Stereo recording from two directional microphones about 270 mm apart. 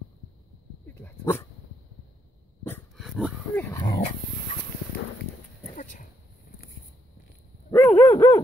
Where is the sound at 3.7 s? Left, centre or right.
Centre.